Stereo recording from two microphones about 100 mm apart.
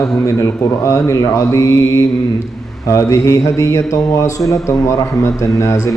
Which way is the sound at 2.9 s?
30° left (ahead or behind).